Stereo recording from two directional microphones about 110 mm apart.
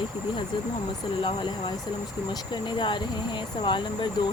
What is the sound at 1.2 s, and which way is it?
Speech, 45° left (ahead or behind).